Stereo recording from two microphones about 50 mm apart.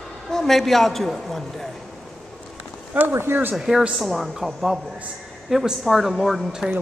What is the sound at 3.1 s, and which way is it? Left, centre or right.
Speech, right.